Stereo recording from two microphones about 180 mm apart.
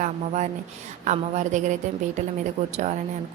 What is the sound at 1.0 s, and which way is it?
Speech, 40° right (ahead or behind).